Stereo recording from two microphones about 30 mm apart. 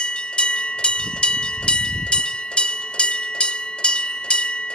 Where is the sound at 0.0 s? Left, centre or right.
Left.